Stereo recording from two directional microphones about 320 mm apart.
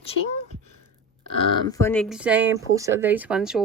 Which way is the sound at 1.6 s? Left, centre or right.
Centre.